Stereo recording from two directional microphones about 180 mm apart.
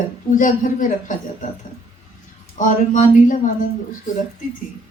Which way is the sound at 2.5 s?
45° left (ahead or behind).